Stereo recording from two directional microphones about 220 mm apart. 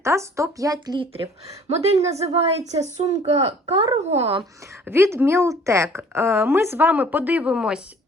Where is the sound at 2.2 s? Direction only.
30° right (ahead or behind).